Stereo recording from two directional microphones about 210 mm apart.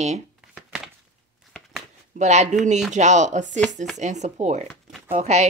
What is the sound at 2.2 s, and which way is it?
Speech, 35° right (ahead or behind).